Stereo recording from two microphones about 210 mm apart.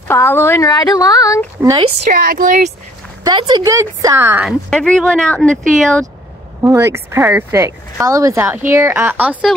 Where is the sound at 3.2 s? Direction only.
20° right (ahead or behind).